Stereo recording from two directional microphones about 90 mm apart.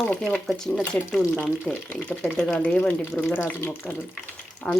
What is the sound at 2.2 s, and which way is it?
Speech, 5° left (ahead or behind).